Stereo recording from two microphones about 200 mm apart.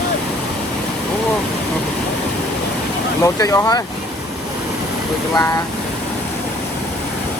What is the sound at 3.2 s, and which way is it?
Speech, 15° left (ahead or behind).